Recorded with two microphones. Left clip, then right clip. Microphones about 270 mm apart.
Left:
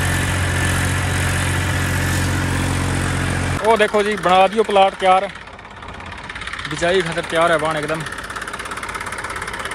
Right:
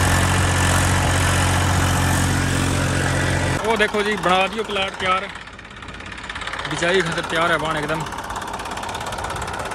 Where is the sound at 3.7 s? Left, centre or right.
Centre.